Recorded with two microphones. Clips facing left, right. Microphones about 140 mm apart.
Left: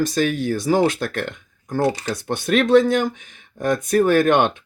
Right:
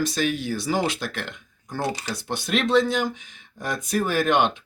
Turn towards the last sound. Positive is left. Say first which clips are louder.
# left 6 dB
turn(degrees=50)  # may be behind; listen again after turning